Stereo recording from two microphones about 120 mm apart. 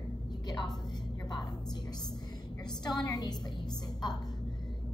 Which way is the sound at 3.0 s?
30° left (ahead or behind).